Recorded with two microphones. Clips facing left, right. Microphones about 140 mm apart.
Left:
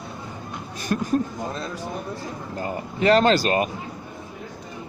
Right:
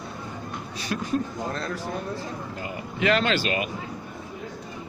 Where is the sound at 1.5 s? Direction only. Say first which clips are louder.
Even; 15° left (ahead or behind).